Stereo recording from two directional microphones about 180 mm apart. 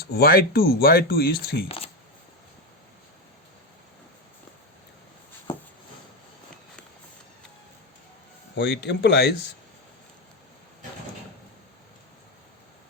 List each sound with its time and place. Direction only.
0.0 s speech: 60° left (ahead or behind)
1.6 s speech: 35° left (ahead or behind)
8.5 s speech: 70° left (ahead or behind)